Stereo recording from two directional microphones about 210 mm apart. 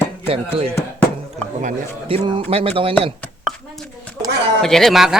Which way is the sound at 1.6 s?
25° right (ahead or behind).